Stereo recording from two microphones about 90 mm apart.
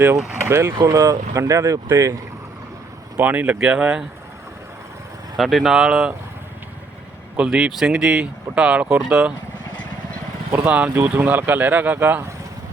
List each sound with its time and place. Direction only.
0.4 s speech: 30° right (ahead or behind)
3.2 s speech: 20° right (ahead or behind)
5.4 s speech: centre (ahead or behind)
7.3 s speech: 10° right (ahead or behind)
8.9 s speech: 25° right (ahead or behind)
10.5 s speech: 20° right (ahead or behind)